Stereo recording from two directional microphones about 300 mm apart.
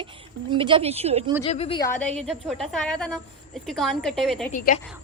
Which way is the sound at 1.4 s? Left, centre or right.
Centre.